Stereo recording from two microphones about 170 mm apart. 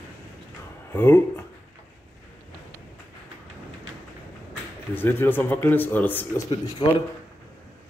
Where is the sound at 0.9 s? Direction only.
15° left (ahead or behind).